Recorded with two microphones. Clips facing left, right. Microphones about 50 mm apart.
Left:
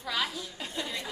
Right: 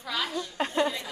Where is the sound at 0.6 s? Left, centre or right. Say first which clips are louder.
Right 12 dB; right.